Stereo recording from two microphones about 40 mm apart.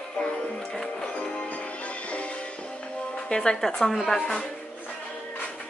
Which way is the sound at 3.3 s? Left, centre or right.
Left.